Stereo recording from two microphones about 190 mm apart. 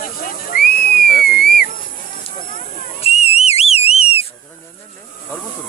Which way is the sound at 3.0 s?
35° left (ahead or behind).